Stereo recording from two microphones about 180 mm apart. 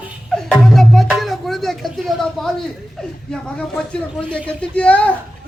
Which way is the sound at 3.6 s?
5° left (ahead or behind).